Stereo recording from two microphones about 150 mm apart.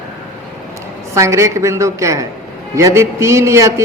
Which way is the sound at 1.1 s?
20° right (ahead or behind).